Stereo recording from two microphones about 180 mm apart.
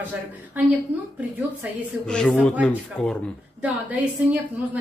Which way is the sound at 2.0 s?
5° left (ahead or behind).